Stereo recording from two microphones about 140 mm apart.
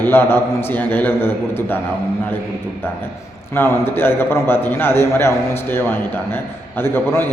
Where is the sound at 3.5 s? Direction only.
15° left (ahead or behind).